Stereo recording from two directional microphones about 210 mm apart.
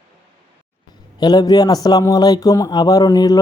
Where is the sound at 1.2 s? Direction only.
20° left (ahead or behind).